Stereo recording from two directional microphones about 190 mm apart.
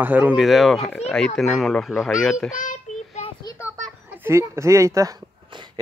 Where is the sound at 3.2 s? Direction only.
20° left (ahead or behind).